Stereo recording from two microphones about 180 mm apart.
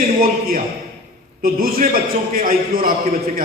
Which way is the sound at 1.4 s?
55° right (ahead or behind).